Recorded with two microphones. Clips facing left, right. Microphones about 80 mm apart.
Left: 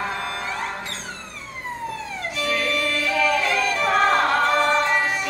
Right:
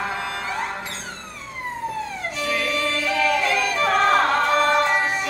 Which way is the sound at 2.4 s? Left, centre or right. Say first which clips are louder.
Even; centre.